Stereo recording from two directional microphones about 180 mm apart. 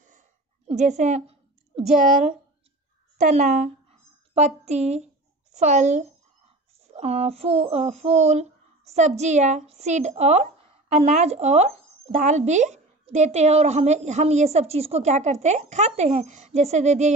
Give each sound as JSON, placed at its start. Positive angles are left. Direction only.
{"t": 0.7, "sound": "speech", "side_deg": -40}
{"t": 1.9, "sound": "a woman's voice", "side_deg": -5}
{"t": 3.2, "sound": "a sound", "side_deg": -40}
{"t": 7.0, "sound": "speech", "side_deg": -35}